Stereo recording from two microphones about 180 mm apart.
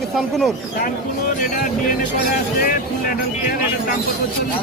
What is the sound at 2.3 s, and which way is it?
Speech, 50° left (ahead or behind).